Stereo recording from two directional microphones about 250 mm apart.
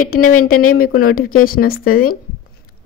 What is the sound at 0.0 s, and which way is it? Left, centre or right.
Speech, left.